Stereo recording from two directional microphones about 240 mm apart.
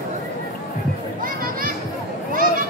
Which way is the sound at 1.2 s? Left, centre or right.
Right.